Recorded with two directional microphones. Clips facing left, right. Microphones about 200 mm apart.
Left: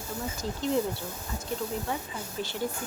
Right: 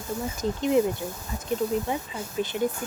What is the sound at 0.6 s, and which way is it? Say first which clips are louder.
Speech: right 5 dB; 15° right (ahead or behind).